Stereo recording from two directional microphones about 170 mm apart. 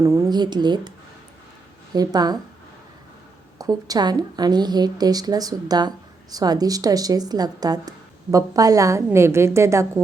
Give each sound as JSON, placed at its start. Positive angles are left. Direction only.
{"t": 0.0, "sound": "speech", "side_deg": -15}
{"t": 3.6, "sound": "speech", "side_deg": -20}